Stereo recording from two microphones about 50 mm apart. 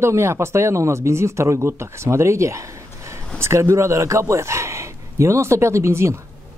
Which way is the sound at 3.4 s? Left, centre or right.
Right.